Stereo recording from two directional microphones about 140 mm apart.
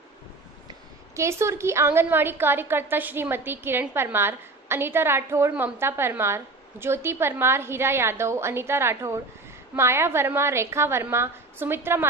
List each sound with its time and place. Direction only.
1.1 s a woman's voice: 20° right (ahead or behind)